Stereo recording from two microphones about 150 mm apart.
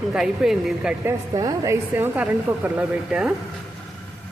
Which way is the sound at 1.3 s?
25° right (ahead or behind).